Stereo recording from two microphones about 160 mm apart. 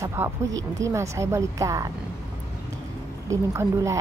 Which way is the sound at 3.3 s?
20° right (ahead or behind).